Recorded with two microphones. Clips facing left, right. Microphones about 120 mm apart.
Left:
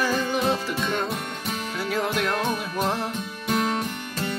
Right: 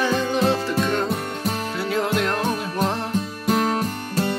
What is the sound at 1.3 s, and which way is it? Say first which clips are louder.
Music: right 5 dB; 35° right (ahead or behind).